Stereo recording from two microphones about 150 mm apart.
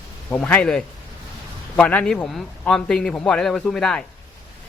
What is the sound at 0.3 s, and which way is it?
A man's voice, 10° left (ahead or behind).